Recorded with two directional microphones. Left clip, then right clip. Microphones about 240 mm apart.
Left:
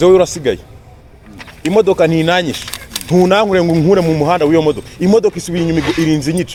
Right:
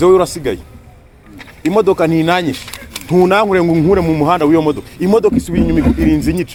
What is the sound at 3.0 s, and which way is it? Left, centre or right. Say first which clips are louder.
Speech: even; right.